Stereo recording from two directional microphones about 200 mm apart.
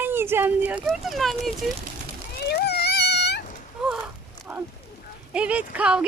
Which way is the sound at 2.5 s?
55° left (ahead or behind).